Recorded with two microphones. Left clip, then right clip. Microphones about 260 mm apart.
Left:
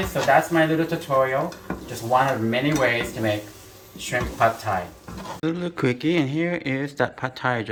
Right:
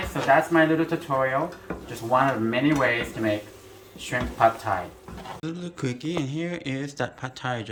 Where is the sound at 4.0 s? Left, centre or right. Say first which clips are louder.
Even; right.